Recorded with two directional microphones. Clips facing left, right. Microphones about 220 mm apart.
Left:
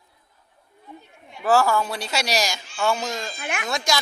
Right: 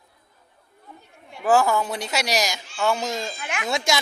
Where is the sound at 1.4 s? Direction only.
15° right (ahead or behind).